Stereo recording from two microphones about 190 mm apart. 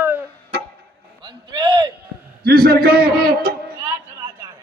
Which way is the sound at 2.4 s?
55° right (ahead or behind).